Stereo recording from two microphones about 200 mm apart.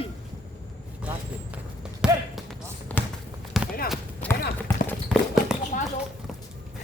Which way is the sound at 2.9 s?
5° left (ahead or behind).